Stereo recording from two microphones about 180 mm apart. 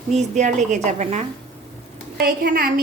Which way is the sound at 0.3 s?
40° right (ahead or behind).